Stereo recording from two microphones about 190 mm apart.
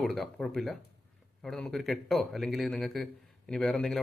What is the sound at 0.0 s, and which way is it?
A man's voice, centre (ahead or behind).